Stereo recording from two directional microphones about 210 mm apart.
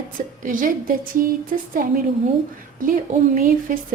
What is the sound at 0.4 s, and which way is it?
A woman's voice, 40° right (ahead or behind).